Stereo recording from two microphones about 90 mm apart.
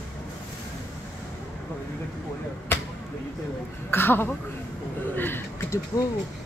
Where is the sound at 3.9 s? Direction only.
25° left (ahead or behind).